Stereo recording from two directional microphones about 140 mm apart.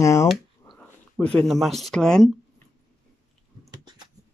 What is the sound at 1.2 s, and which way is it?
Speech, 5° left (ahead or behind).